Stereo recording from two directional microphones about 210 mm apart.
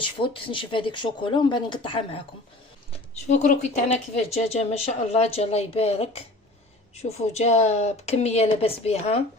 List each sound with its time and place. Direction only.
0.0 s speech: 25° left (ahead or behind)
2.9 s a sound: 35° left (ahead or behind)
4.4 s a woman's voice: 30° left (ahead or behind)